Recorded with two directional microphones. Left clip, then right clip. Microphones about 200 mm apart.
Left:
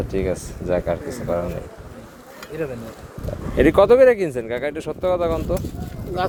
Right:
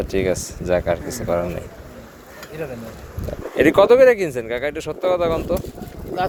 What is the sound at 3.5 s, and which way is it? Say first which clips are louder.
Speech: right 1 dB; 20° left (ahead or behind).